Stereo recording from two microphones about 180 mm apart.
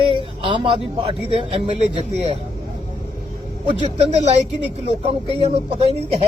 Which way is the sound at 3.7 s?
35° right (ahead or behind).